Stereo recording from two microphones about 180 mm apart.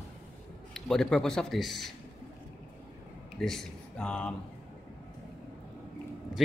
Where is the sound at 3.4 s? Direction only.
Centre (ahead or behind).